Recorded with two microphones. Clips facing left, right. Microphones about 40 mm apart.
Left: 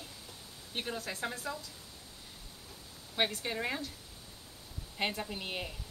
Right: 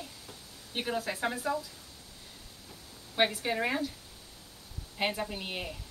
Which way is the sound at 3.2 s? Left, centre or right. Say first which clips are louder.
Right 5 dB; centre.